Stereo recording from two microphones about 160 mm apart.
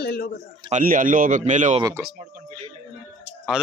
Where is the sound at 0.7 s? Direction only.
55° right (ahead or behind).